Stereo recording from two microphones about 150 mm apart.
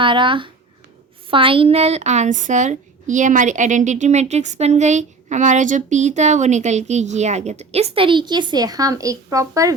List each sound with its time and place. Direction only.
0.0 s a woman's voice: 35° right (ahead or behind)